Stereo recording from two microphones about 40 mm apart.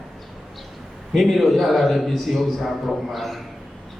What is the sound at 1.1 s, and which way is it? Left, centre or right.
A man's voice, centre.